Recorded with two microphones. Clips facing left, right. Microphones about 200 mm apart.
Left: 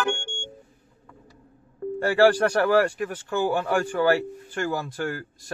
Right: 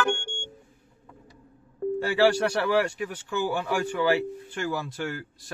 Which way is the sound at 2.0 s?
50° left (ahead or behind).